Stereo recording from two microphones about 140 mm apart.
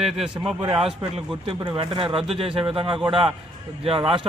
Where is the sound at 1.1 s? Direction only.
40° right (ahead or behind).